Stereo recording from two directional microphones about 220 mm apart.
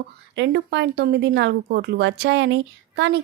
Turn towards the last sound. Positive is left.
turn(degrees=-55)  # may be behind; listen again after turning